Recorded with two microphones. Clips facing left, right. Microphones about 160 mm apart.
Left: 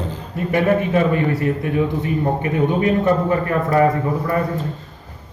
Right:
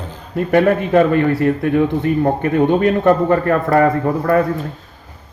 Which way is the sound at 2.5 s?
75° right (ahead or behind).